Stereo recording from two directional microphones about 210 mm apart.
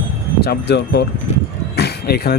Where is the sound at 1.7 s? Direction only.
50° left (ahead or behind).